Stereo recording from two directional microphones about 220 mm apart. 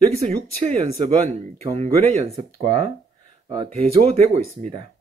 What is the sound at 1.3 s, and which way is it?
A man's voice, 30° right (ahead or behind).